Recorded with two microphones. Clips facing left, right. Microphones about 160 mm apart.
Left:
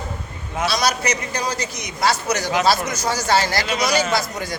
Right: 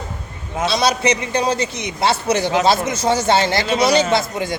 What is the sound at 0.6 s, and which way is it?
A man's voice, 25° right (ahead or behind).